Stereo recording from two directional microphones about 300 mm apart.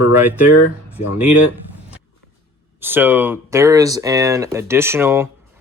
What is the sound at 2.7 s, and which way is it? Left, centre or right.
Speech, centre.